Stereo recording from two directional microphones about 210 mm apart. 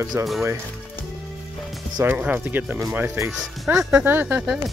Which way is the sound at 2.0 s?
10° right (ahead or behind).